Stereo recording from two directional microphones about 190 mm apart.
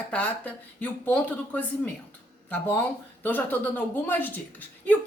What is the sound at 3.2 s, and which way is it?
Speech, 10° left (ahead or behind).